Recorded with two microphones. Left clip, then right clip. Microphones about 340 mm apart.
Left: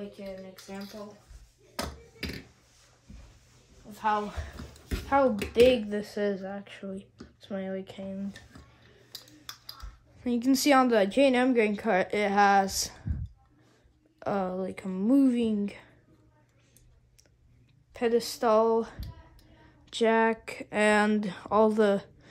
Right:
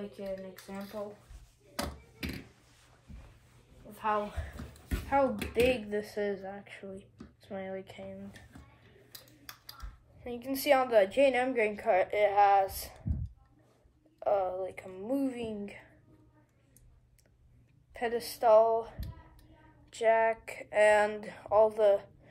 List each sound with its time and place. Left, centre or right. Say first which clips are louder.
0.1 s speech: right 2 dB; centre
1.8 s a sound: left 2 dB; centre
5.0 s speech: left 4 dB; left
10.2 s a woman's voice: left 5 dB; left
14.2 s a woman's voice: right 1 dB; left
17.9 s a woman's voice: left 7 dB; left